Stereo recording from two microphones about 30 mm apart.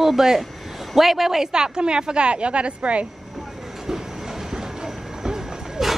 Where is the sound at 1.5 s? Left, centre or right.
Right.